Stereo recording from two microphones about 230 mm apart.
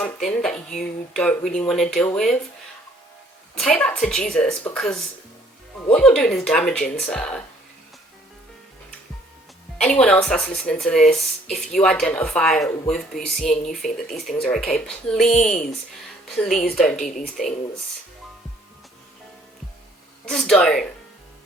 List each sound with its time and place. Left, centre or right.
0.3 s speech: centre
3.6 s speech: centre
9.7 s speech: centre
20.2 s speech: centre